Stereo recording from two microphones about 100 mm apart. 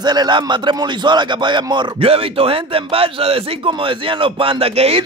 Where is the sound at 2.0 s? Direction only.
70° right (ahead or behind).